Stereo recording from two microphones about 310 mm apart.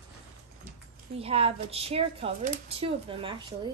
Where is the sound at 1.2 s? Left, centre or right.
Centre.